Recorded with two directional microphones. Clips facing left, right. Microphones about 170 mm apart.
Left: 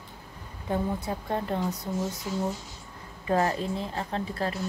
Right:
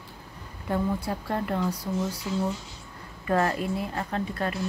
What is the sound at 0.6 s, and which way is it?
Speech, 15° left (ahead or behind).